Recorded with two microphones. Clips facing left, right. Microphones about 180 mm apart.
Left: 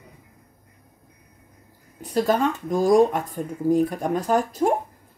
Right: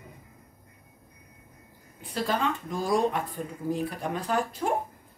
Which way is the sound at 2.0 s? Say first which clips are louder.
Left 7 dB; 45° left (ahead or behind).